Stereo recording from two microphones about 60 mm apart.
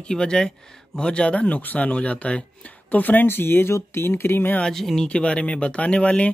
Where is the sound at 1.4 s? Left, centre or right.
Left.